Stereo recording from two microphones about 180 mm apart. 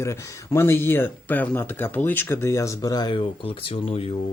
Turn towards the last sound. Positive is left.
turn(degrees=30)  # may be behind; listen again after turning